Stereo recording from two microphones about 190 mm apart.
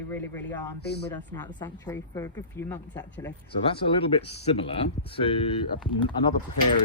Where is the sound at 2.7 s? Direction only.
10° left (ahead or behind).